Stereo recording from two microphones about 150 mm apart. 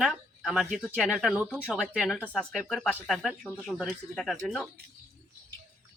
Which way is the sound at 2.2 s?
10° left (ahead or behind).